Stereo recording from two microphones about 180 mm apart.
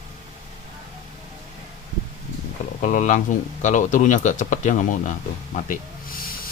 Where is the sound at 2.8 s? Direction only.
45° left (ahead or behind).